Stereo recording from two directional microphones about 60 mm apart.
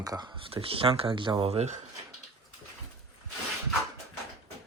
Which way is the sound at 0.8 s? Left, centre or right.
Right.